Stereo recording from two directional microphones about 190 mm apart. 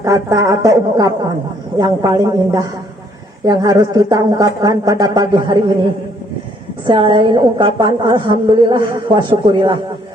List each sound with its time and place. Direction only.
0.0 s a woman's voice: 15° right (ahead or behind)
6.8 s a woman's voice: 25° right (ahead or behind)